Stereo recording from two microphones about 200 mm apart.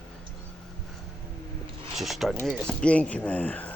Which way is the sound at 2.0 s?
Centre (ahead or behind).